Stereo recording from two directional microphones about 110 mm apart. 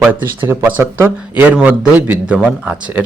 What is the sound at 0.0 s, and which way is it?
Speech, 20° right (ahead or behind).